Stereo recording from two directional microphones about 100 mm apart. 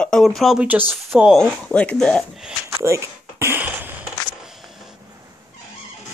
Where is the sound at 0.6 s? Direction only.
15° right (ahead or behind).